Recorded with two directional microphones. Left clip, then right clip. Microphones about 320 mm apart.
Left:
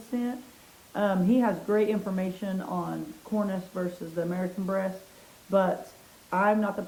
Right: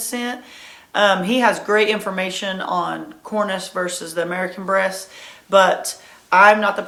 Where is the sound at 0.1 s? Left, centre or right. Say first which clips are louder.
Right 6 dB; centre.